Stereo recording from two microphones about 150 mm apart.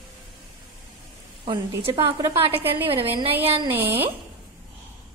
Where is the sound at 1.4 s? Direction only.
40° right (ahead or behind).